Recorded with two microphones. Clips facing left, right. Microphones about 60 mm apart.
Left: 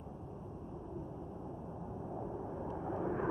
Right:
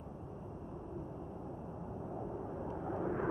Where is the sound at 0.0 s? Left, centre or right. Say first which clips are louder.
Even; right.